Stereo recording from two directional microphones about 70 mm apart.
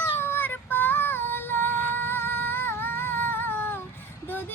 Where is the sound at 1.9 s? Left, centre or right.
Left.